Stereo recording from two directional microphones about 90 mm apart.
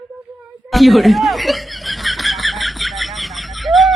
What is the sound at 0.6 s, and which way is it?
Snicker, centre (ahead or behind).